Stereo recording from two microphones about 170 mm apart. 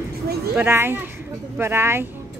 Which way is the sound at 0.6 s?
15° right (ahead or behind).